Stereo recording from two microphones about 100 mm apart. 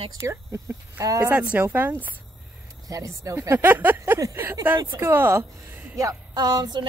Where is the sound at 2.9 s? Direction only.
30° right (ahead or behind).